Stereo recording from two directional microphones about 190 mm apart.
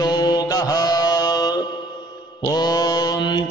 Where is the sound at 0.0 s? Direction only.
20° left (ahead or behind).